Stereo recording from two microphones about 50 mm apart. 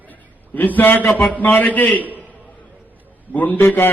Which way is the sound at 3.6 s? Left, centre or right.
Left.